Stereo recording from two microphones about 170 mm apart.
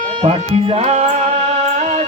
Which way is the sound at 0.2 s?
35° right (ahead or behind).